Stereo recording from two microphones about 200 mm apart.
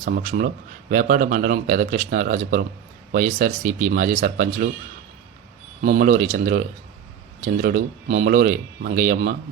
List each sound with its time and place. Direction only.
0.0 s speech: 40° right (ahead or behind)
5.8 s speech: 40° right (ahead or behind)